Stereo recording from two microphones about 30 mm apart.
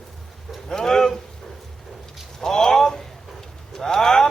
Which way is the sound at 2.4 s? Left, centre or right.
Centre.